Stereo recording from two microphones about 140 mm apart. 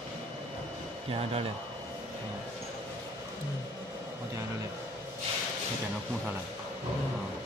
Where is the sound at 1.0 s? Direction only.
45° right (ahead or behind).